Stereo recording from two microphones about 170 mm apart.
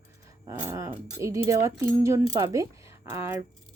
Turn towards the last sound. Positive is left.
turn(degrees=-15)  # may be behind; listen again after turning